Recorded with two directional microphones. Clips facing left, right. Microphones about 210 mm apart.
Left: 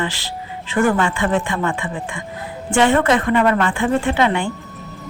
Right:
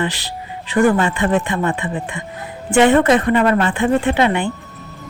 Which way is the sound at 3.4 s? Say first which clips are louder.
Right 1 dB; 35° right (ahead or behind).